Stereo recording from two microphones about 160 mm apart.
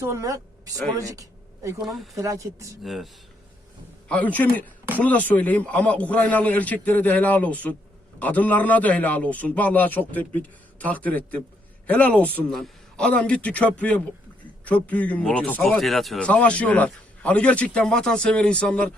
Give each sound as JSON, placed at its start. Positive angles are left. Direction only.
{"t": 0.0, "sound": "speech", "side_deg": -20}
{"t": 0.9, "sound": "a sound", "side_deg": -20}
{"t": 1.8, "sound": "speech", "side_deg": 0}
{"t": 2.1, "sound": "speech", "side_deg": -20}
{"t": 2.8, "sound": "speech", "side_deg": 0}
{"t": 4.1, "sound": "speech", "side_deg": 10}